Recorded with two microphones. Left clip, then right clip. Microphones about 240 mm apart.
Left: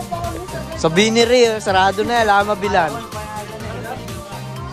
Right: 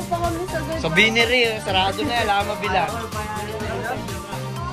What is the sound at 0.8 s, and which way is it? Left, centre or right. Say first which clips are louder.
Speech: left 3 dB; centre.